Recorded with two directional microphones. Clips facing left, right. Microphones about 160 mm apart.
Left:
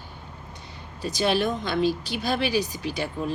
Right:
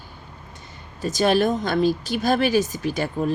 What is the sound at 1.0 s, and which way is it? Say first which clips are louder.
Speech: right 5 dB; 45° right (ahead or behind).